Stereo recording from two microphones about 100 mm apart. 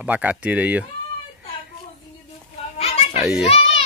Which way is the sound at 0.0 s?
15° right (ahead or behind).